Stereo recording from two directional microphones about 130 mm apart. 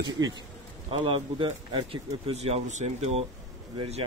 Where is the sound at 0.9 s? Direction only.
40° right (ahead or behind).